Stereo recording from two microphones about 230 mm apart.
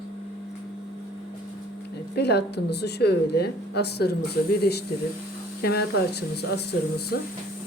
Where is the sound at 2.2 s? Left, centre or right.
Left.